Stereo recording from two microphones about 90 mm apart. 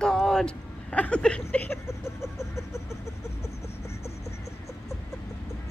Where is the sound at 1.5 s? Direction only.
25° left (ahead or behind).